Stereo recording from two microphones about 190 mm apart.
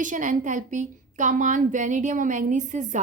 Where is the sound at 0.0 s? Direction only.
45° right (ahead or behind).